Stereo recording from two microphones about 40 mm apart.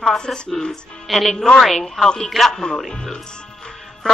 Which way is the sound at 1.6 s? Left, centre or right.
Centre.